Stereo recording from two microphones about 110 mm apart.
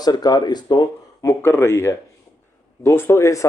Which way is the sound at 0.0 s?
35° left (ahead or behind).